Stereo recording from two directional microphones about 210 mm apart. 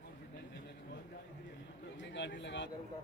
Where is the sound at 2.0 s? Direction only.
60° left (ahead or behind).